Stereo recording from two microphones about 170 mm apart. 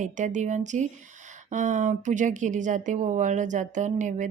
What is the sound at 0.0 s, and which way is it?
Speech, 45° right (ahead or behind).